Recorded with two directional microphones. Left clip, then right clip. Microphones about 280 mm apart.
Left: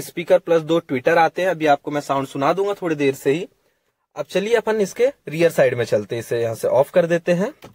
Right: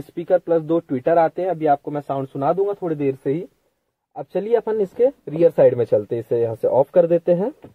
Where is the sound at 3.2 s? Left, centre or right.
Centre.